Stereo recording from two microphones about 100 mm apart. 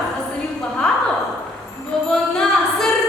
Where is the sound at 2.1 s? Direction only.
5° left (ahead or behind).